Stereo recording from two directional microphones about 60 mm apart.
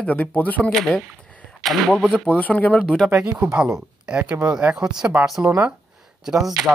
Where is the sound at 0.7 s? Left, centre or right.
Centre.